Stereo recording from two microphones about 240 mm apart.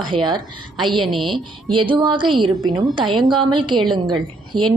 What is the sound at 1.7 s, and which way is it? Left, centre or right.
Speech, centre.